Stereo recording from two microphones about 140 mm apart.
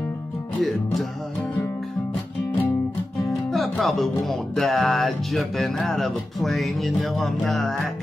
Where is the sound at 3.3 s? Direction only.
Centre (ahead or behind).